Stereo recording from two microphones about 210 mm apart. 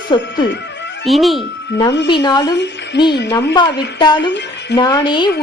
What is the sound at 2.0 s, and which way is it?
Speech, 20° left (ahead or behind).